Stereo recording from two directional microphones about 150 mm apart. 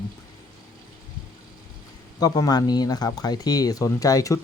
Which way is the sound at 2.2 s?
25° left (ahead or behind).